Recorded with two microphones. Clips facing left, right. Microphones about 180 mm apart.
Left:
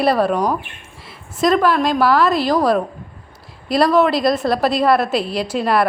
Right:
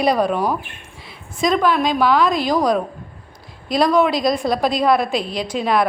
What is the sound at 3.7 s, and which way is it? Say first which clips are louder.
A woman's voice: left 1 dB; 5° left (ahead or behind).